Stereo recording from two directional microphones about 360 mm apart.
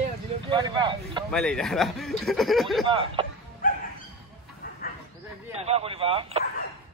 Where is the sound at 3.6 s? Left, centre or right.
Left.